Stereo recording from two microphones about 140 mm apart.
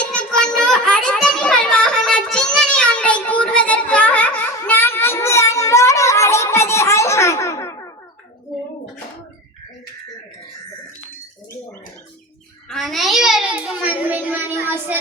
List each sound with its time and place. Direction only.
0.0 s children playing: 5° left (ahead or behind)
2.6 s child singing: 5° left (ahead or behind)
12.6 s a sound: centre (ahead or behind); by 14.9 s 15° right (ahead or behind)